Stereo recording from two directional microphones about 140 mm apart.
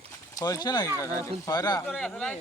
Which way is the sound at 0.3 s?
25° left (ahead or behind).